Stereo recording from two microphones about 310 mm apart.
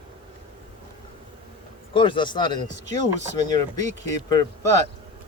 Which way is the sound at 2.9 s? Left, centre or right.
Right.